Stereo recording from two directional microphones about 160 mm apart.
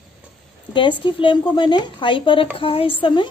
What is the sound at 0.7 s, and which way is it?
A woman's voice, 30° left (ahead or behind).